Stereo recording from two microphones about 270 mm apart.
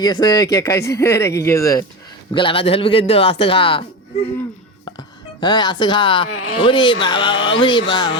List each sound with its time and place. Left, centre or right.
0.0 s speech: centre
4.9 s speech: centre
6.3 s speech: left
6.6 s speech: centre